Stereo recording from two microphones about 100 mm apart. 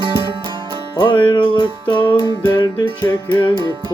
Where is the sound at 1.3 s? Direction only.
55° left (ahead or behind).